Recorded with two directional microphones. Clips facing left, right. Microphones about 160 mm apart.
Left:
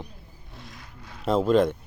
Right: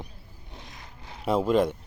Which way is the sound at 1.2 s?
10° right (ahead or behind).